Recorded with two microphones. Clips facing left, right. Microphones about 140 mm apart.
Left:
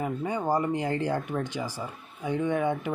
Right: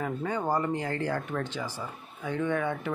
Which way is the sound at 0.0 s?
15° left (ahead or behind).